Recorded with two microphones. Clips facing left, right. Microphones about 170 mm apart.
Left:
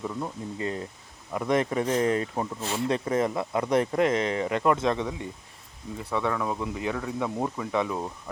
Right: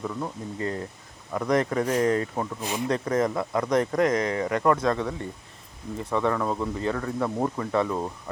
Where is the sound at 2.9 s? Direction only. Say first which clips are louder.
Right 2 dB; 25° left (ahead or behind).